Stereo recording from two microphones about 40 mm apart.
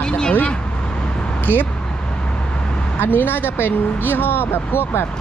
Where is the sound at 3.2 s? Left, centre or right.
Left.